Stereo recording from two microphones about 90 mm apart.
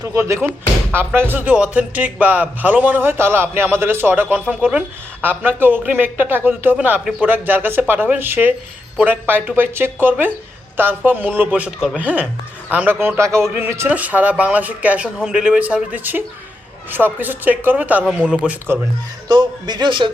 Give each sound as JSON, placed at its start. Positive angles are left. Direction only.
{"t": 0.0, "sound": "a man's voice", "side_deg": -35}
{"t": 19.3, "sound": "a man's voice", "side_deg": -55}